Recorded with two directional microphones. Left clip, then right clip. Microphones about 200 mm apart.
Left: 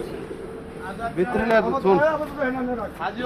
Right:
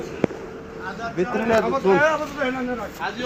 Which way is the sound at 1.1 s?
15° right (ahead or behind).